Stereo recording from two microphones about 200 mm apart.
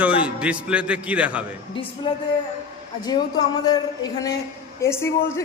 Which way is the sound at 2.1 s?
25° left (ahead or behind).